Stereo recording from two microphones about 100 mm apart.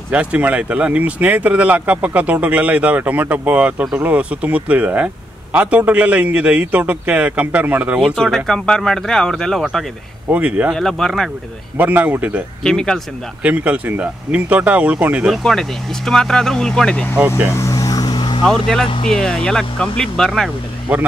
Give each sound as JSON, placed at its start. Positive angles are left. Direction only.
{"t": 0.1, "sound": "speech", "side_deg": -15}
{"t": 8.0, "sound": "speech", "side_deg": 0}
{"t": 10.3, "sound": "speech", "side_deg": -15}
{"t": 10.7, "sound": "speech", "side_deg": 5}
{"t": 11.7, "sound": "speech", "side_deg": -15}
{"t": 12.6, "sound": "speech", "side_deg": 5}
{"t": 13.4, "sound": "speech", "side_deg": -15}
{"t": 16.1, "sound": "speech", "side_deg": 5}
{"t": 17.5, "sound": "vehicle", "side_deg": 30}
{"t": 18.1, "sound": "vehicle", "side_deg": 55}
{"t": 18.4, "sound": "speech", "side_deg": 5}
{"t": 20.9, "sound": "speech", "side_deg": -15}